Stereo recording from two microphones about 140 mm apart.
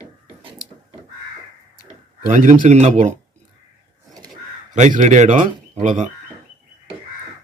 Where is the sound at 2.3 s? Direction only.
65° right (ahead or behind).